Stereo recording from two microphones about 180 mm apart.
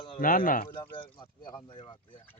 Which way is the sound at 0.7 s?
30° left (ahead or behind).